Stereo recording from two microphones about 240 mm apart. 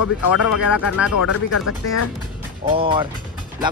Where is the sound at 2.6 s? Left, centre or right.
Right.